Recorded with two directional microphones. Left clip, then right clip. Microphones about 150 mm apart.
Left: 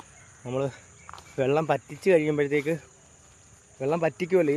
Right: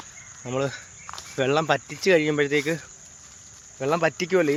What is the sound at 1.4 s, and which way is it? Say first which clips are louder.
Speech: right 2 dB; 10° left (ahead or behind).